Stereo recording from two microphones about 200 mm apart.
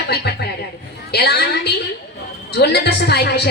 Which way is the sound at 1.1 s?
55° left (ahead or behind).